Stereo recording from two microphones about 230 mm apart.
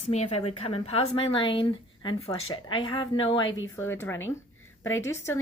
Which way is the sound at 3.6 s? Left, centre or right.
Centre.